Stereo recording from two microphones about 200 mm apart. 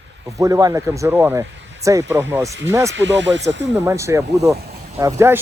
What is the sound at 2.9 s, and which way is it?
Speech, 65° right (ahead or behind).